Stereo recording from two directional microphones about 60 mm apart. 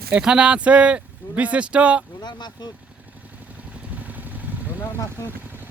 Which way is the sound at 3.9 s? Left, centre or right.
Right.